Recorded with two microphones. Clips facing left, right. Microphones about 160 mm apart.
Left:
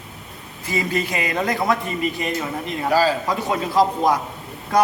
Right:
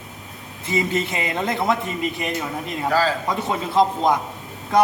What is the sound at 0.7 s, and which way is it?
A man's voice, 25° right (ahead or behind).